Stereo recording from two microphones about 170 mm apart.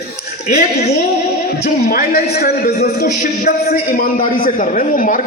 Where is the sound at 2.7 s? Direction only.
40° left (ahead or behind).